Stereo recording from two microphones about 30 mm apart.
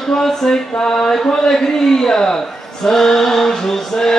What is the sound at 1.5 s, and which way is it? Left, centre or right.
Speech, centre.